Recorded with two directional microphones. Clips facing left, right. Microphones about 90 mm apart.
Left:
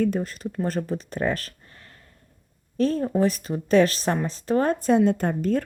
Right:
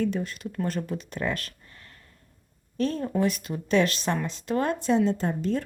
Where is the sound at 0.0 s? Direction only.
40° left (ahead or behind).